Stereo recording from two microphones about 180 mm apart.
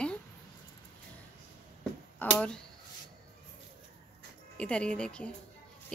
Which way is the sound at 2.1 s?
10° left (ahead or behind).